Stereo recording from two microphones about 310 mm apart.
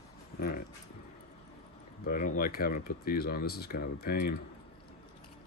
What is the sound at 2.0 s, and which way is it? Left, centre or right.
Speech, left.